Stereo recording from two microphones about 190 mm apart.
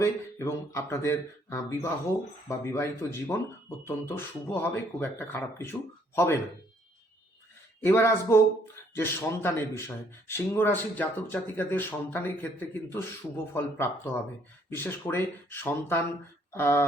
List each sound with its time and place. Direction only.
0.0 s speech: 15° left (ahead or behind)
7.9 s speech: 15° left (ahead or behind)